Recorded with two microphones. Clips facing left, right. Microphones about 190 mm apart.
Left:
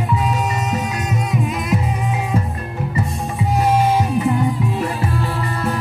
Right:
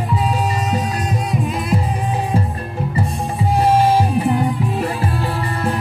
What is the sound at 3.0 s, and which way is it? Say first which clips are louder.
Music: right 1 dB; 30° right (ahead or behind).